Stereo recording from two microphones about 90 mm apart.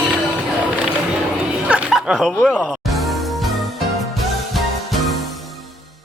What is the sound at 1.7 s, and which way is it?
Music, 10° right (ahead or behind).